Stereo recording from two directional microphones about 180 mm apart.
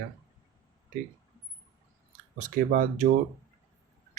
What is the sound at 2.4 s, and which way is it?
Speech, 45° right (ahead or behind).